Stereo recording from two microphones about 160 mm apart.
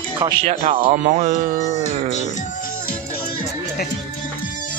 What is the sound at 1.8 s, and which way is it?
Music, 45° left (ahead or behind).